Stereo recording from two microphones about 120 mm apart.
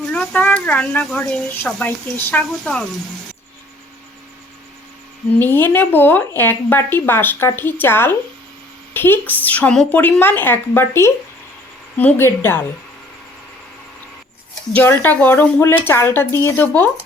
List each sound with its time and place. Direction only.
0.0 s a woman's voice: 10° left (ahead or behind)
5.4 s a woman's voice: 15° left (ahead or behind)
14.7 s a woman's voice: 15° left (ahead or behind)